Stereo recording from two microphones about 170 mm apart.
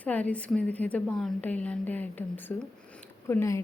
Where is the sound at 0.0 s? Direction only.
10° left (ahead or behind).